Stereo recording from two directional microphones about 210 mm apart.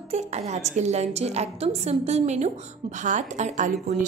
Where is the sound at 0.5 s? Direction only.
35° right (ahead or behind).